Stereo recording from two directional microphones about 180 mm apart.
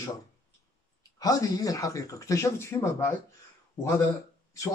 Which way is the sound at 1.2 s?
20° left (ahead or behind).